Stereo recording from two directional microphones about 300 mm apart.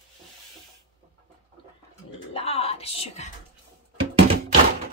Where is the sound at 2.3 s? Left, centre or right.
Centre.